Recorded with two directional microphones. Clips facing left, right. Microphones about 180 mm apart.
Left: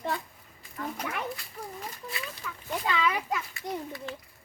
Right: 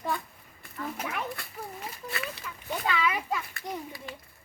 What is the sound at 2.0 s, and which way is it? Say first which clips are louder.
Speech: right 6 dB; 65° right (ahead or behind).